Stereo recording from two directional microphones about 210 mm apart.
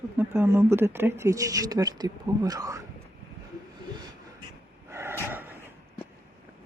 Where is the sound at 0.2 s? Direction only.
10° right (ahead or behind).